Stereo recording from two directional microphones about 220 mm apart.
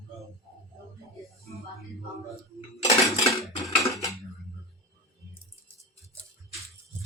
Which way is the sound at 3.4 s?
Centre (ahead or behind).